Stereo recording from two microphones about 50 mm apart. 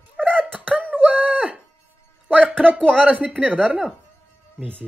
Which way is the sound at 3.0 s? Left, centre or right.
Right.